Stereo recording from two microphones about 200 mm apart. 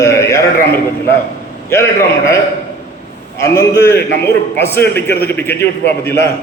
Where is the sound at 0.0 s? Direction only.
15° left (ahead or behind).